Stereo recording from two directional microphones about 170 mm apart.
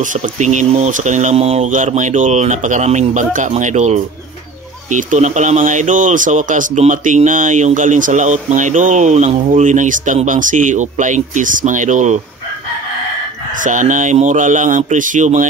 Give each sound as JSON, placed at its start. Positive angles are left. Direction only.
{"t": 0.0, "sound": "speech", "side_deg": -50}
{"t": 13.6, "sound": "speech", "side_deg": -50}